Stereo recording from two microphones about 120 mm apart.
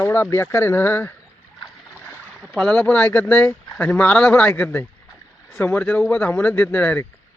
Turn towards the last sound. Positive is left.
turn(degrees=15)  # may be behind; listen again after turning